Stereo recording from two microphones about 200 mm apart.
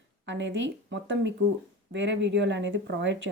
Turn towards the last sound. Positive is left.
turn(degrees=-65)  # may be behind; listen again after turning